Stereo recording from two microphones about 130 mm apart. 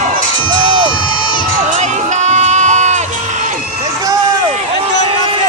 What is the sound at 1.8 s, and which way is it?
Crowd, 65° right (ahead or behind).